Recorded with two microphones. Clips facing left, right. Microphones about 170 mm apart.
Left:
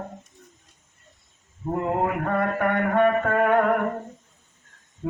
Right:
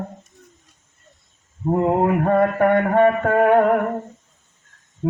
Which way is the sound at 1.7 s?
35° right (ahead or behind).